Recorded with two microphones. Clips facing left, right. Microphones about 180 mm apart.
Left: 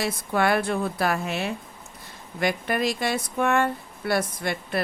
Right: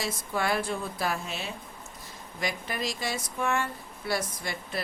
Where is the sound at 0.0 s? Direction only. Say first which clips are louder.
Left 6 dB; 65° left (ahead or behind).